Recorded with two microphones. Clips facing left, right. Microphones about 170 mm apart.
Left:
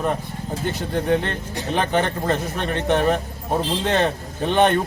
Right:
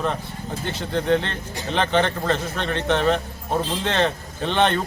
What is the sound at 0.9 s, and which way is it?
A man's voice, 15° left (ahead or behind).